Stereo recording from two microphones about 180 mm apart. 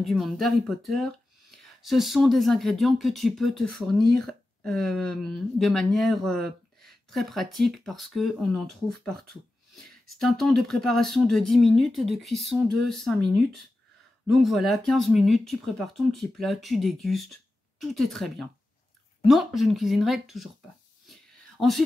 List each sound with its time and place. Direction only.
0.0 s speech: centre (ahead or behind)
14.2 s speech: centre (ahead or behind)
21.1 s a sound: centre (ahead or behind)